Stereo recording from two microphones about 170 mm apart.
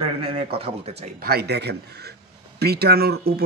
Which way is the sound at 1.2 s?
70° right (ahead or behind).